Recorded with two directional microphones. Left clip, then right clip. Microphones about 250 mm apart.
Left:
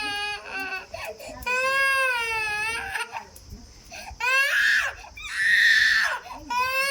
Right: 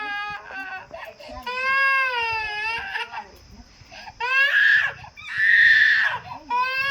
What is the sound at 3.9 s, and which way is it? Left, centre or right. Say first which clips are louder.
Crying: right 1 dB; centre.